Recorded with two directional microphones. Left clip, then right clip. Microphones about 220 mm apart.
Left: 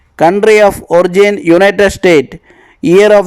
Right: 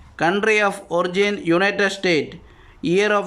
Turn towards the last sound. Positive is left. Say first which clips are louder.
# left 13 dB
turn(degrees=30)  # may be behind; listen again after turning